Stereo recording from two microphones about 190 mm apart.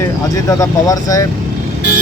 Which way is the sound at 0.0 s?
15° left (ahead or behind).